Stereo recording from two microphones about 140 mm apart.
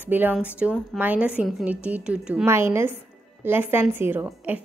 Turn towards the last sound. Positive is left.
turn(degrees=-10)  # may be behind; listen again after turning